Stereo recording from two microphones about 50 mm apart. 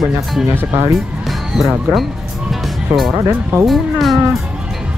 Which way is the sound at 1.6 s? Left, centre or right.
Centre.